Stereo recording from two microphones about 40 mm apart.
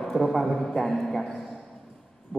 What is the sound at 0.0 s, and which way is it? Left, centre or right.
A man's voice, centre.